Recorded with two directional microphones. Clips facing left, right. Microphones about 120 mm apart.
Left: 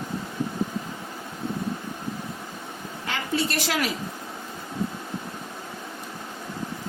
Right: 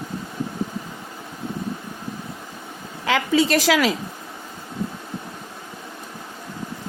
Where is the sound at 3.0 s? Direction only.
90° right.